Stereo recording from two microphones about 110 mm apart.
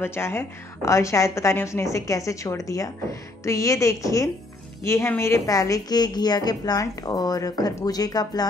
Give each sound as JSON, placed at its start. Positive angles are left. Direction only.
{"t": 0.0, "sound": "a woman's voice", "side_deg": 20}